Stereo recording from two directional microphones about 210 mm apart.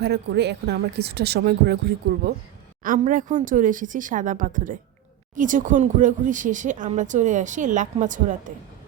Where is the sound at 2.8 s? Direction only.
40° right (ahead or behind).